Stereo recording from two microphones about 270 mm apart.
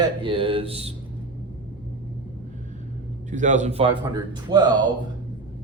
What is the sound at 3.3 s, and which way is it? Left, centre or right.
Speech, right.